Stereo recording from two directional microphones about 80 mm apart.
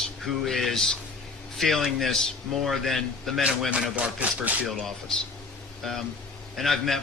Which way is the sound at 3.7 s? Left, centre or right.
Centre.